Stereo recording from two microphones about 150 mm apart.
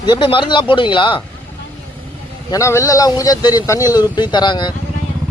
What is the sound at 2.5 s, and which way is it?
A man's voice, 20° left (ahead or behind).